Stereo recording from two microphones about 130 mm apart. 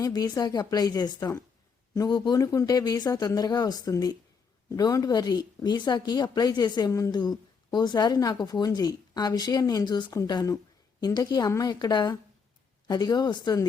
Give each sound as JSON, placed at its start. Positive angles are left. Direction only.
{"t": 0.0, "sound": "speech", "side_deg": 30}